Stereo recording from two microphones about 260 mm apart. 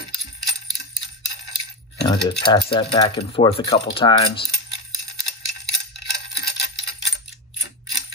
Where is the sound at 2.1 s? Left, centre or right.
Centre.